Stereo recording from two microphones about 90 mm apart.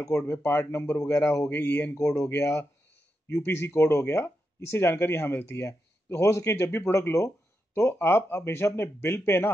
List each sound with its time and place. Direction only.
0.1 s speech: 25° left (ahead or behind)
1.5 s speech: 20° left (ahead or behind)